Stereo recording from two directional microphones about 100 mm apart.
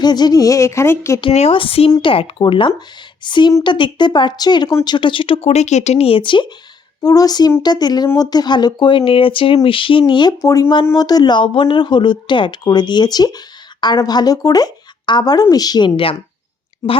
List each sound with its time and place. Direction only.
0.0 s speech: 45° left (ahead or behind); by 1.2 s 30° left (ahead or behind)
1.3 s a woman's voice: 80° left; by 4.9 s 35° left (ahead or behind)
4.9 s speech: 55° left (ahead or behind)
7.0 s speech: 35° left (ahead or behind)
10.4 s speech: 35° left (ahead or behind)